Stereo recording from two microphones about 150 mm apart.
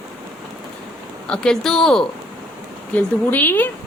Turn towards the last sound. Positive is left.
turn(degrees=10)  # may be behind; listen again after turning